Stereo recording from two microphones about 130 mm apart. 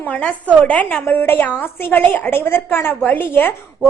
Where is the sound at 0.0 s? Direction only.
10° left (ahead or behind).